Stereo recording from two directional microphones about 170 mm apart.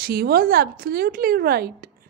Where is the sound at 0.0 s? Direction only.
65° right (ahead or behind).